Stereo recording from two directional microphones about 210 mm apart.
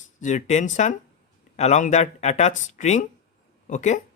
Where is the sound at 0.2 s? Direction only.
35° left (ahead or behind).